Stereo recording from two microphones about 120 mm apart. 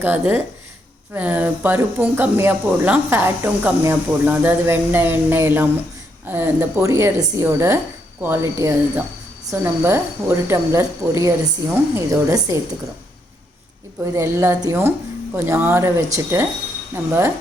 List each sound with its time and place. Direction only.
0.0 s a woman's voice: 15° right (ahead or behind)
14.0 s a woman's voice: 20° right (ahead or behind)